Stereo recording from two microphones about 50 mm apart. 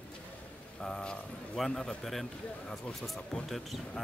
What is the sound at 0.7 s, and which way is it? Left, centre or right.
A man's voice, centre.